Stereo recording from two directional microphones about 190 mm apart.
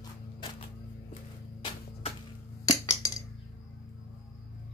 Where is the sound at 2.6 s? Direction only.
15° left (ahead or behind).